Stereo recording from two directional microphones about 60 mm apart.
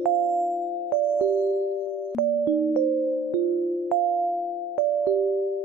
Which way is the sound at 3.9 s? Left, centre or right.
Centre.